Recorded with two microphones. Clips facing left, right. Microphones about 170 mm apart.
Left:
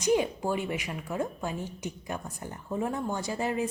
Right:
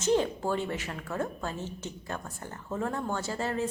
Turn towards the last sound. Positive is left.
turn(degrees=15)  # may be behind; listen again after turning